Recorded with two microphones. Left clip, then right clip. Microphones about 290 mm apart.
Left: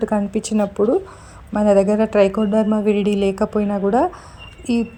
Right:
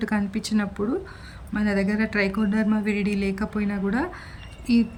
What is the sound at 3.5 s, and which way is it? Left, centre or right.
Speech, left.